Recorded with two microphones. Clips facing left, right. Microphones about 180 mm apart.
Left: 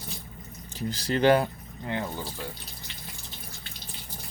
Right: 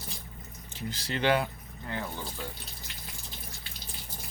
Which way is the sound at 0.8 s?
35° left (ahead or behind).